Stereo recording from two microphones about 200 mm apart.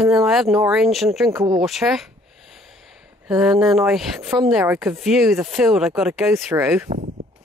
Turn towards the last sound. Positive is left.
turn(degrees=-10)  # may be behind; listen again after turning